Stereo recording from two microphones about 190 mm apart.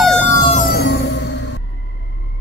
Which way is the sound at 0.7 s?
55° left (ahead or behind).